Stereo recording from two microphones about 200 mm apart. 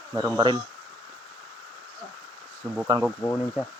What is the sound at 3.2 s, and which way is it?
Speech, 10° left (ahead or behind).